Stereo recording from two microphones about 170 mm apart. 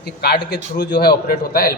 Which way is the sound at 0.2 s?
70° left (ahead or behind).